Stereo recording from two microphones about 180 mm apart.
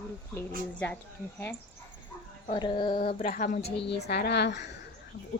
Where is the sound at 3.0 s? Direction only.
45° left (ahead or behind).